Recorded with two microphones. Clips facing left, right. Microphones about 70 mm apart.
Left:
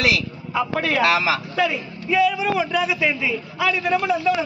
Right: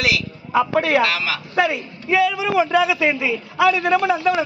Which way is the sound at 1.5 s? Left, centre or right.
Right.